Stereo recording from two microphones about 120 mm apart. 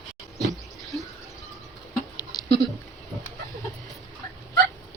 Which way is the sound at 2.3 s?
35° left (ahead or behind).